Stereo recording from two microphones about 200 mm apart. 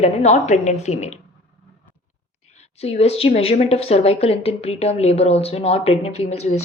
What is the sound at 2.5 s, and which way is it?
A woman's voice, 30° left (ahead or behind).